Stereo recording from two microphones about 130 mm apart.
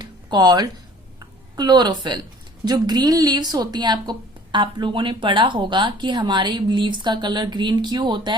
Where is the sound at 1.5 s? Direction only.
35° right (ahead or behind).